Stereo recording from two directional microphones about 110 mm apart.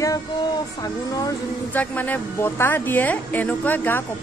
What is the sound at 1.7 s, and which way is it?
A woman's voice, 15° left (ahead or behind).